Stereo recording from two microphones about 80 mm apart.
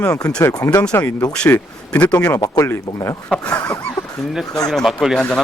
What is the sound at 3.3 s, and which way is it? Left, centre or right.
Speech, centre.